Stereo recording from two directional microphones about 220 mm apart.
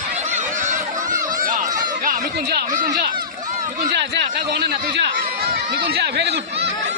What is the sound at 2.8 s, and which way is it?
Run, 40° right (ahead or behind).